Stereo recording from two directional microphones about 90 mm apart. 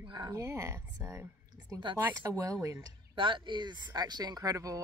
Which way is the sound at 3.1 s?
65° right (ahead or behind).